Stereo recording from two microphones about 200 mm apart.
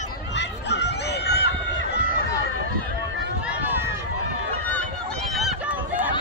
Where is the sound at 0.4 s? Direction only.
60° left (ahead or behind).